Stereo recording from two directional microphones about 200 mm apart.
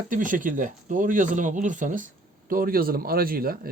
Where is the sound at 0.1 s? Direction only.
40° right (ahead or behind).